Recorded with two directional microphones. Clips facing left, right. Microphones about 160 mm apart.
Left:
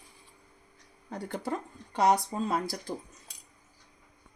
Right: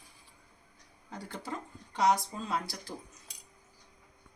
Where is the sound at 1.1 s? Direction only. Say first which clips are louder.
Left 6 dB; 60° left (ahead or behind).